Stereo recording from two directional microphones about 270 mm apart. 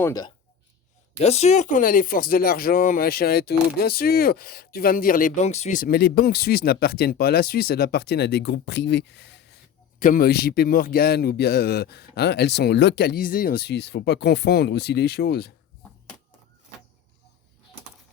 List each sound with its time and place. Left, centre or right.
0.0 s speech: centre; by 15.5 s left